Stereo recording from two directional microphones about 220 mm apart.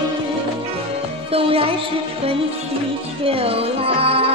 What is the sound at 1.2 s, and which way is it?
Music, 25° right (ahead or behind).